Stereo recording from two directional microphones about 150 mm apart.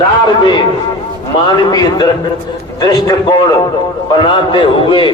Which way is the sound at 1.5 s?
25° left (ahead or behind).